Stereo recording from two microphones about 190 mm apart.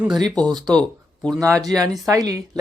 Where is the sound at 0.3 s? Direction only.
5° left (ahead or behind).